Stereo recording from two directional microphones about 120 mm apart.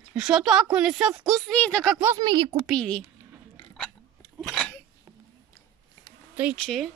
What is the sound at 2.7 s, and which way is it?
Speech, 5° left (ahead or behind).